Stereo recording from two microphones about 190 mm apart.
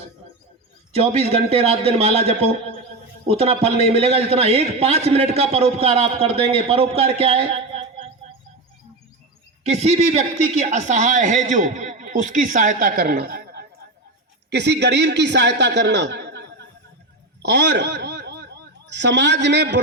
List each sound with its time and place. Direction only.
0.9 s a man's voice: 30° right (ahead or behind)
9.6 s a man's voice: 35° right (ahead or behind); by 16.5 s 65° right (ahead or behind)
17.4 s a sound: 65° right (ahead or behind)